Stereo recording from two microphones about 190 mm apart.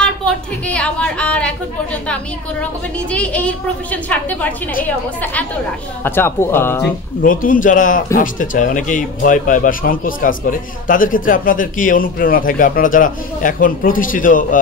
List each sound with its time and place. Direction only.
0.0 s a sound: 5° left (ahead or behind)
3.1 s a woman's voice: 5° left (ahead or behind)
7.2 s speech: 45° left (ahead or behind)